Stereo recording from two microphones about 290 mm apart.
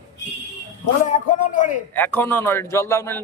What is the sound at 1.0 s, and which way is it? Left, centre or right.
Speech, left.